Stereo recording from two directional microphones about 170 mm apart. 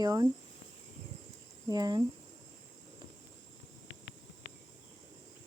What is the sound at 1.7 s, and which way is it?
Speech, 25° right (ahead or behind).